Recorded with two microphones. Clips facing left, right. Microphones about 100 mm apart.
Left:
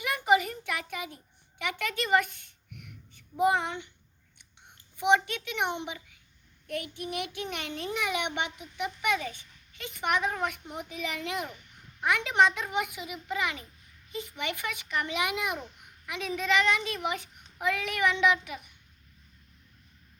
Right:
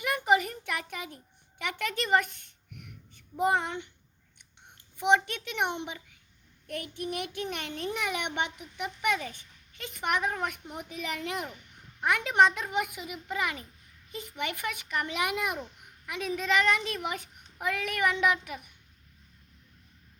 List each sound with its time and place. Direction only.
0.0 s a sound: 40° right (ahead or behind)
3.4 s a child's voice: 40° right (ahead or behind)
4.9 s a child's voice: 35° right (ahead or behind)